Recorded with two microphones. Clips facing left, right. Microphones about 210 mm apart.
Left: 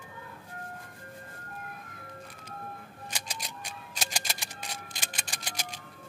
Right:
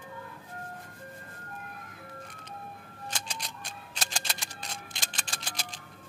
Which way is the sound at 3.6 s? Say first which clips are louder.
Left 1 dB; 10° left (ahead or behind).